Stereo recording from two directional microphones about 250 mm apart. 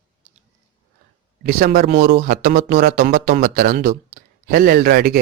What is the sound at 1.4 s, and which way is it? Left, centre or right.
Speech, right.